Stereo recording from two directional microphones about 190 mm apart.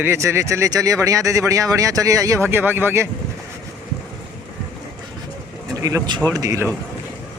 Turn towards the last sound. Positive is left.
turn(degrees=-15)  # may be behind; listen again after turning